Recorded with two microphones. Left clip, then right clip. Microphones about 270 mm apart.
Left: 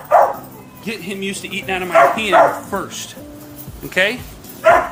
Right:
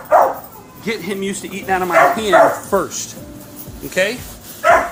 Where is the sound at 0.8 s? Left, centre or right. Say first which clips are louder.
Right 3 dB; centre.